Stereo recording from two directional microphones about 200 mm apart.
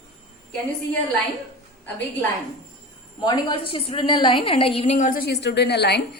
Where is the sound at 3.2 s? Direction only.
25° left (ahead or behind).